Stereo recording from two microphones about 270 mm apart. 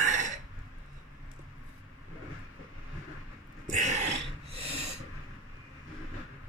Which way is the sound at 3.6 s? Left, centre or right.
Right.